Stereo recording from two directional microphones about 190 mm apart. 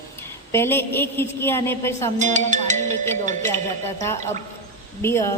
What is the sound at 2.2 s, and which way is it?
Speech, 40° right (ahead or behind).